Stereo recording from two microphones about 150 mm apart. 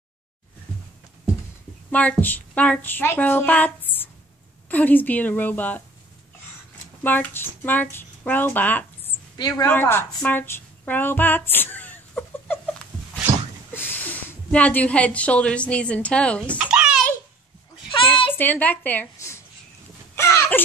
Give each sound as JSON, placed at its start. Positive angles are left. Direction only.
{"t": 1.9, "sound": "a woman's voice", "side_deg": 10}
{"t": 7.0, "sound": "speech", "side_deg": 10}
{"t": 9.7, "sound": "a sound", "side_deg": 15}
{"t": 13.7, "sound": "a woman's voice", "side_deg": 10}
{"t": 16.5, "sound": "babbling", "side_deg": -5}
{"t": 18.4, "sound": "a woman's voice", "side_deg": 10}
{"t": 20.2, "sound": "a sound", "side_deg": 20}